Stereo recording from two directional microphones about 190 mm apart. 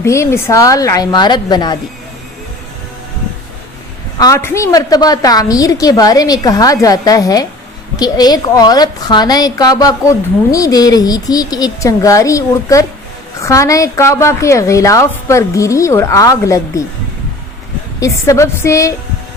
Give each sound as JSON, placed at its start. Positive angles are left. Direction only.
{"t": 0.0, "sound": "a woman's voice", "side_deg": 15}
{"t": 4.2, "sound": "a woman's voice", "side_deg": 15}
{"t": 18.0, "sound": "a woman's voice", "side_deg": 15}